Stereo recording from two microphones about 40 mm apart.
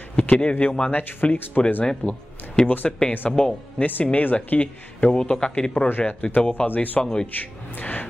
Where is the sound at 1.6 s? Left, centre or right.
Left.